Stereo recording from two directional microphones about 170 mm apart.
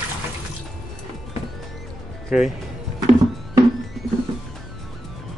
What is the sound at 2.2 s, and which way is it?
Speech, centre (ahead or behind).